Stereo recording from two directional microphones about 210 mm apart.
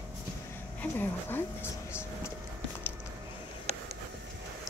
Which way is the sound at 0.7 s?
10° left (ahead or behind).